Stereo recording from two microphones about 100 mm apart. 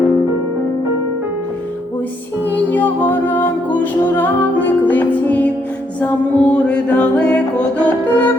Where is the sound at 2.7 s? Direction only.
15° left (ahead or behind).